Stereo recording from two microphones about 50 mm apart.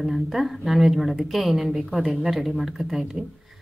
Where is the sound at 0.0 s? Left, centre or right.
Centre.